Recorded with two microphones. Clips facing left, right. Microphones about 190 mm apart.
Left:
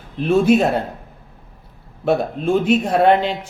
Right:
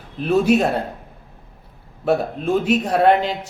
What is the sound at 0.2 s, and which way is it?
Speech, 5° right (ahead or behind).